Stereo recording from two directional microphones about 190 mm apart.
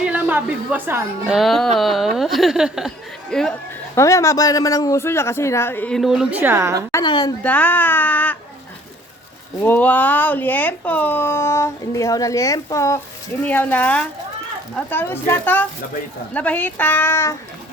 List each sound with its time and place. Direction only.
0.0 s a woman's voice: 10° right (ahead or behind)
1.4 s speech: centre (ahead or behind)
3.9 s speech: 15° left (ahead or behind); by 6.8 s 15° right (ahead or behind)
6.9 s a woman's voice: 25° left (ahead or behind)
7.4 s speech: 10° left (ahead or behind)
9.6 s speech: 10° left (ahead or behind)